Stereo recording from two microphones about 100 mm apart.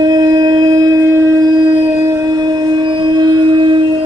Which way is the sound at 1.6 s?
50° right (ahead or behind).